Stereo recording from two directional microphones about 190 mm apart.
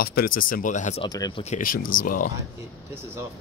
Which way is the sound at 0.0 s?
55° left (ahead or behind).